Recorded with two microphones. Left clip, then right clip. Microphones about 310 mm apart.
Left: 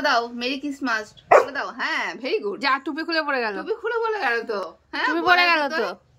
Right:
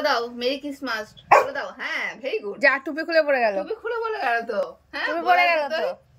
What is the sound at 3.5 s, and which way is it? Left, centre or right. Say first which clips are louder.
Speech: left 1 dB; centre.